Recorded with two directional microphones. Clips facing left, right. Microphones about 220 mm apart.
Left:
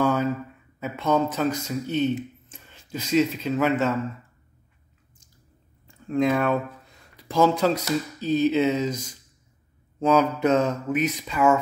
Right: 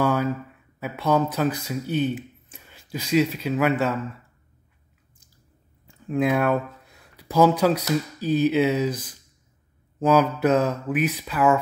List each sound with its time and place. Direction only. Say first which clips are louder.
0.0 s a sound: even; 10° right (ahead or behind)
0.8 s speech: right 1 dB; 10° right (ahead or behind)
6.0 s speech: even; 5° right (ahead or behind)
9.9 s speech: right 1 dB; 5° right (ahead or behind)